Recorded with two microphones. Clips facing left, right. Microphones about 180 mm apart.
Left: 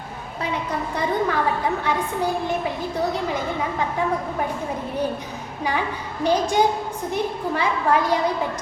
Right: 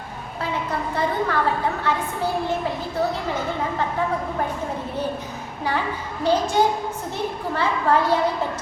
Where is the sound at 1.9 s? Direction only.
15° left (ahead or behind).